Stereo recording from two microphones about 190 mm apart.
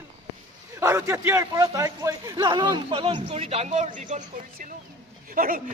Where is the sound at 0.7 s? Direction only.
15° right (ahead or behind).